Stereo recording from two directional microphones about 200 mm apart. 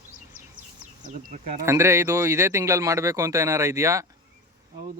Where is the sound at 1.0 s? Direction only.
40° right (ahead or behind).